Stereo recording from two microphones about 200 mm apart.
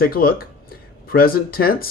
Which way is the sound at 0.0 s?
45° left (ahead or behind).